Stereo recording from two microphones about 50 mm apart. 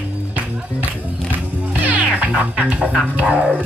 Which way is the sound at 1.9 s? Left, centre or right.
Right.